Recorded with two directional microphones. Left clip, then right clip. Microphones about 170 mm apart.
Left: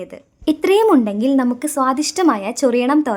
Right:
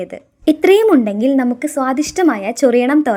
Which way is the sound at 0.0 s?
20° right (ahead or behind).